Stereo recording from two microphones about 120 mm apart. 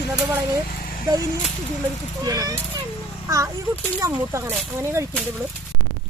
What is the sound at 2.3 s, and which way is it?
Speech, 30° right (ahead or behind).